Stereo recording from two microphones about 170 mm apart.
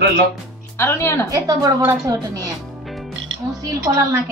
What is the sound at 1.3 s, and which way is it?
Speech, 20° right (ahead or behind).